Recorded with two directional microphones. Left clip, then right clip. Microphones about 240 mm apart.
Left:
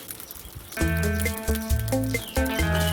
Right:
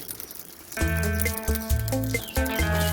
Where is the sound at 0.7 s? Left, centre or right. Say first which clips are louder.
Left 1 dB; centre.